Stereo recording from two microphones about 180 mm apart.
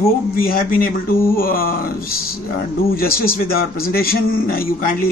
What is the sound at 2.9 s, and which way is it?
A man's voice, 55° left (ahead or behind).